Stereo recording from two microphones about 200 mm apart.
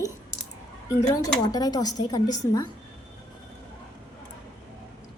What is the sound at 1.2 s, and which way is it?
Speech, 20° left (ahead or behind).